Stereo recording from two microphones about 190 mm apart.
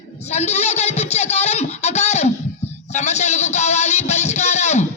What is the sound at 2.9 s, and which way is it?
Music, 35° left (ahead or behind).